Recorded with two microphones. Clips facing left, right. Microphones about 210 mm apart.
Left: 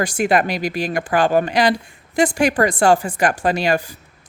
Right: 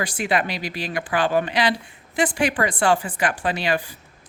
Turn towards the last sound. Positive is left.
turn(degrees=45)  # may be behind; listen again after turning